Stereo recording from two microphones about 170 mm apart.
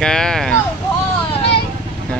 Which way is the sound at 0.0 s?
5° left (ahead or behind).